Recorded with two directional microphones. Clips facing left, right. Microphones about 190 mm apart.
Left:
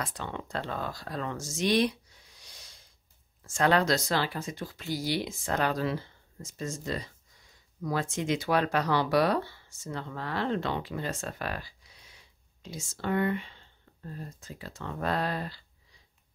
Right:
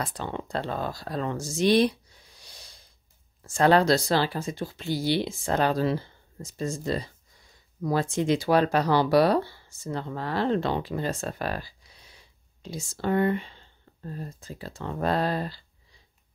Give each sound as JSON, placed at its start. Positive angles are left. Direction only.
{"t": 0.0, "sound": "speech", "side_deg": -35}
{"t": 2.4, "sound": "snort", "side_deg": -35}
{"t": 3.4, "sound": "speech", "side_deg": -35}